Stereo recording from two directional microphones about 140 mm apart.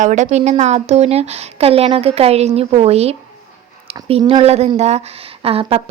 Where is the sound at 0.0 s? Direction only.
60° right (ahead or behind).